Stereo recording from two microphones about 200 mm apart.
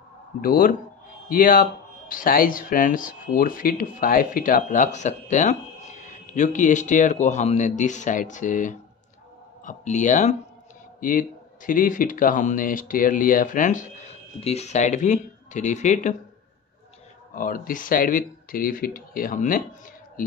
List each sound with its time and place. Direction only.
0.4 s speech: 45° left (ahead or behind)
17.3 s speech: 45° left (ahead or behind)